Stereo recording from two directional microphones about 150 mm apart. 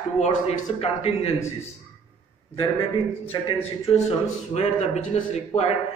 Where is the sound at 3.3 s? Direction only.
35° left (ahead or behind).